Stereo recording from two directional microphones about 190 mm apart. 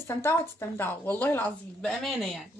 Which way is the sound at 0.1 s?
15° left (ahead or behind).